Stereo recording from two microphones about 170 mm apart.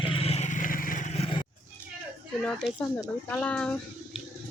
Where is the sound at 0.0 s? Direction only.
35° left (ahead or behind); by 1.0 s 55° left (ahead or behind).